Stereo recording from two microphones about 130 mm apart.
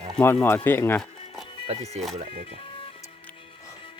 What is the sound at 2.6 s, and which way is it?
Music, 45° left (ahead or behind).